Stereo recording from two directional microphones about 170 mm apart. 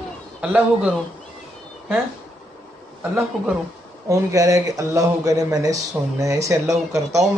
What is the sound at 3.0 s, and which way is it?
Speech, 10° right (ahead or behind).